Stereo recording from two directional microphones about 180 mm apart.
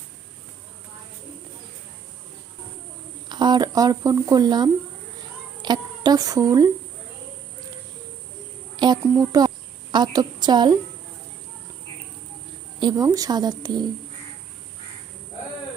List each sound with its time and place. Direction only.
3.2 s speech: 25° right (ahead or behind)
8.7 s speech: 25° right (ahead or behind)
12.8 s speech: 20° right (ahead or behind)